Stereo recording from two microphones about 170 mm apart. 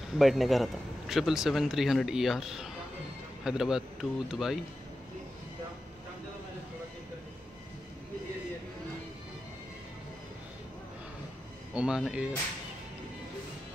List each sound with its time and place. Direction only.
0.1 s speech: centre (ahead or behind)
11.7 s speech: 5° right (ahead or behind)